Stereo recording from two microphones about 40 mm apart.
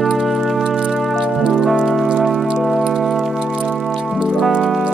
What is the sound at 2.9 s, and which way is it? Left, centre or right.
Music, centre.